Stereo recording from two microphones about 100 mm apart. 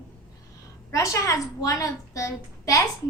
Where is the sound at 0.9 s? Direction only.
30° left (ahead or behind).